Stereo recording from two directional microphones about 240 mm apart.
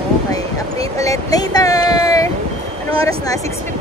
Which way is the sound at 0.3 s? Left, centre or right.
Centre.